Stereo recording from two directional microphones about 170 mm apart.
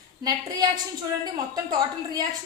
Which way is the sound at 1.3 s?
25° right (ahead or behind).